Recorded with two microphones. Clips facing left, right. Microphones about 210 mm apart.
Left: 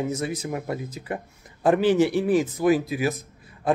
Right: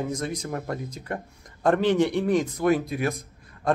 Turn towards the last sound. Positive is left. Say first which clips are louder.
# left 1 dB
turn(degrees=5)  # may be behind; listen again after turning